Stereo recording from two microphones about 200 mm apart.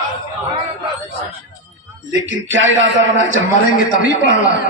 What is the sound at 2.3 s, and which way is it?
Speech, 75° right (ahead or behind).